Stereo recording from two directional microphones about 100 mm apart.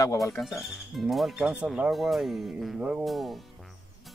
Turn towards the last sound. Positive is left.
turn(degrees=0)  # may be behind; listen again after turning